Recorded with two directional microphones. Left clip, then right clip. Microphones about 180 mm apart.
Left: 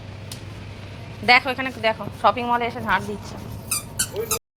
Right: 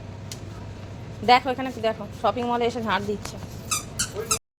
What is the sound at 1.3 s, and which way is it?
A woman's voice, 15° right (ahead or behind).